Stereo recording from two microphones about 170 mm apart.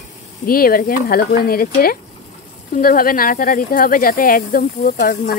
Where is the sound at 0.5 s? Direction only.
60° left (ahead or behind).